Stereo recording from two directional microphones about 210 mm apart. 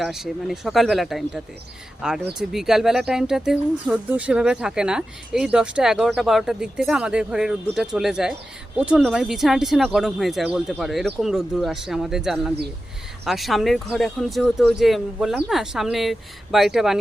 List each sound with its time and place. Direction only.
0.0 s speech: centre (ahead or behind)